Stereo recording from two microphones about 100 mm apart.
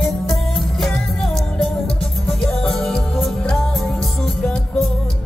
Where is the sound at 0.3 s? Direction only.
Centre (ahead or behind).